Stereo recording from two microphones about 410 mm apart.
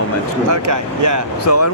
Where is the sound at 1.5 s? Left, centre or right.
Left.